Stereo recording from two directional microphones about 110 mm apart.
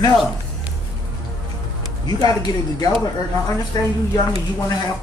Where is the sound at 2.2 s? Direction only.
35° left (ahead or behind).